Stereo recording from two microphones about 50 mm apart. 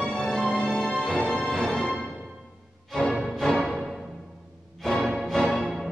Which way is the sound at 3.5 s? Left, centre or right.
Centre.